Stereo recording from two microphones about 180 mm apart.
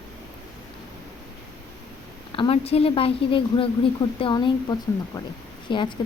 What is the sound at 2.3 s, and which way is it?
A woman's voice, 30° left (ahead or behind).